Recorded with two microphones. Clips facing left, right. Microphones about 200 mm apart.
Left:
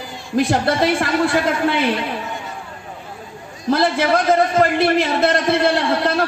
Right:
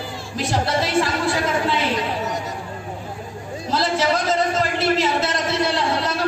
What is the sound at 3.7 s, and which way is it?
A man's voice, 55° left (ahead or behind).